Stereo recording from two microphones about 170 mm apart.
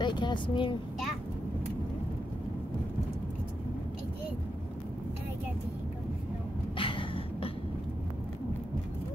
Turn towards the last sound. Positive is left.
turn(degrees=30)  # may be behind; listen again after turning